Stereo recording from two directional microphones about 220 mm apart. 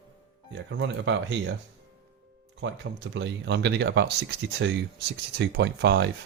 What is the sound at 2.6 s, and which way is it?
Speech, 55° right (ahead or behind).